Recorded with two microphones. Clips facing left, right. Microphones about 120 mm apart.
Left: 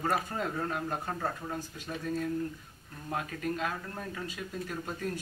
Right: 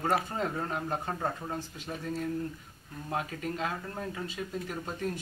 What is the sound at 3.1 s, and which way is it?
Speech, 15° right (ahead or behind).